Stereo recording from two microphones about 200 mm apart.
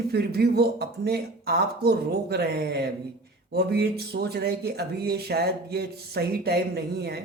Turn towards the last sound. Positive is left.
turn(degrees=-55)  # may be behind; listen again after turning